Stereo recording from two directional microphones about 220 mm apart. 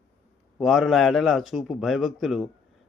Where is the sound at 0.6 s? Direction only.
Centre (ahead or behind).